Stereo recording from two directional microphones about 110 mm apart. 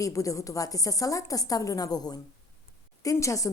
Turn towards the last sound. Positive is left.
turn(degrees=30)  # may be behind; listen again after turning